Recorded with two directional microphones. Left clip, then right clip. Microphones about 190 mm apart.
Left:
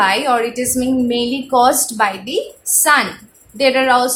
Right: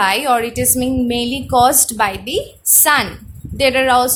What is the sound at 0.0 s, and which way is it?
A woman's voice, 50° right (ahead or behind).